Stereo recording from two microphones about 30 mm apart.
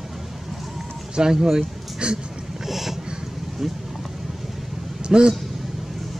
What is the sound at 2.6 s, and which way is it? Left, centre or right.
Boat, centre.